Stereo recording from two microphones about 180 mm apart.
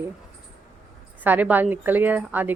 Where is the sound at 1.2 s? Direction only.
10° right (ahead or behind).